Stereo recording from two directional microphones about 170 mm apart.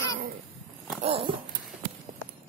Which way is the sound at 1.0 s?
35° right (ahead or behind).